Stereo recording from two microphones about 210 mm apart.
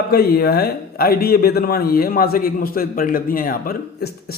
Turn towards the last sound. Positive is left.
turn(degrees=45)  # may be behind; listen again after turning